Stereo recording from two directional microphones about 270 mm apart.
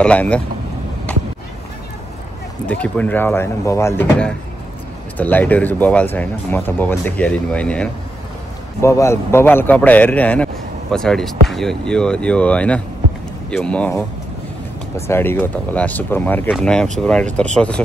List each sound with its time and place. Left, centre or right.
0.0 s a man's voice: centre
2.6 s a man's voice: centre
15.0 s a man's voice: centre